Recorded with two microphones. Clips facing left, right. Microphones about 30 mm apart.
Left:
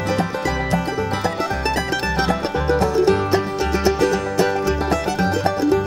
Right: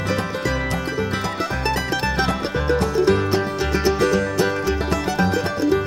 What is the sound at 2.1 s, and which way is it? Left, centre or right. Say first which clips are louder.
Music: left 2 dB; centre.